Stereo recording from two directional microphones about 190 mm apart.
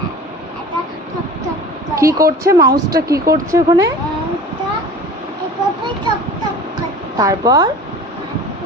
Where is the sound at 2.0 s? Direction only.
15° right (ahead or behind).